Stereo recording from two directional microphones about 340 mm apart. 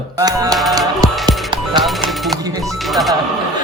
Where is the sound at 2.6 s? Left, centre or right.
Centre.